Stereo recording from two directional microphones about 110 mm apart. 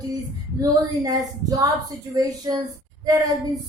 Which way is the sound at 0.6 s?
30° right (ahead or behind).